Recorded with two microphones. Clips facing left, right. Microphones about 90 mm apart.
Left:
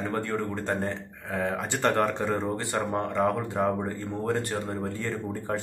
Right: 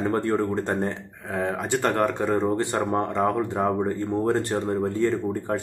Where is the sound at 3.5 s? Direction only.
Centre (ahead or behind).